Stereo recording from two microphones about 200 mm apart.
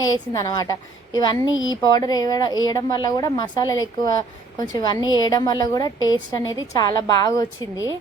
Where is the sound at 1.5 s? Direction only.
75° left (ahead or behind).